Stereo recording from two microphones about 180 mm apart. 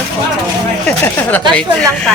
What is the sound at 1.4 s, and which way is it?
Speech, 25° right (ahead or behind).